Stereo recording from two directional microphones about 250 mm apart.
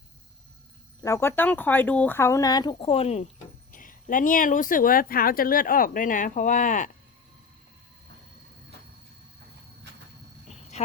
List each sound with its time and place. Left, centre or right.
1.0 s speech: centre; by 6.9 s left